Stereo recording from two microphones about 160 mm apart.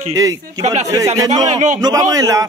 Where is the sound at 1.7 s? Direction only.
20° right (ahead or behind).